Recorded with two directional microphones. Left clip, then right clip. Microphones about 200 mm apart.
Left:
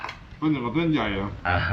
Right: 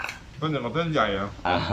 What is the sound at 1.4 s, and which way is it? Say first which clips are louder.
Speech: left 1 dB; 20° right (ahead or behind).